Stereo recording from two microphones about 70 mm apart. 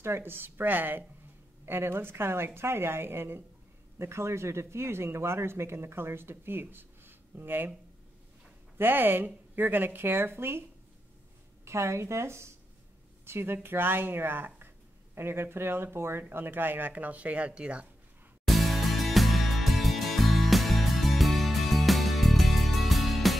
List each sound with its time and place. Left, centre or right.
0.0 s speech: right
8.7 s speech: right
11.6 s speech: right; by 17.8 s centre
18.5 s music: centre